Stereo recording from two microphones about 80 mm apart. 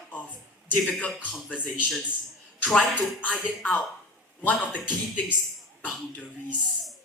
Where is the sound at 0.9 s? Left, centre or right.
Centre.